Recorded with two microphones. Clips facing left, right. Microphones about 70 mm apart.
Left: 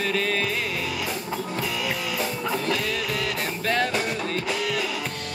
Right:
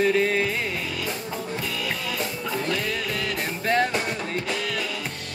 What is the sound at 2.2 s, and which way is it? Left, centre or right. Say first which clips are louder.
Music: left 2 dB; centre.